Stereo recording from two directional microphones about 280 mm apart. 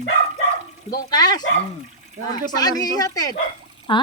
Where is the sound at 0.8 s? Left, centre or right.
Centre.